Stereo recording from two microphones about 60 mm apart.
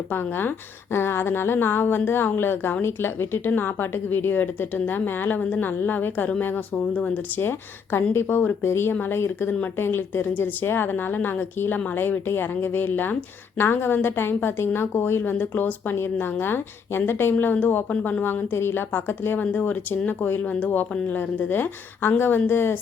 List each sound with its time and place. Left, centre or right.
0.1 s a woman's voice: left
6.9 s speech: left
7.4 s a woman's voice: left
17.3 s a woman's voice: left
19.5 s a woman's voice: left